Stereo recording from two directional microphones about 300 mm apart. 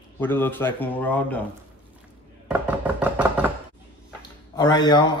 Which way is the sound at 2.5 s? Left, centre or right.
Centre.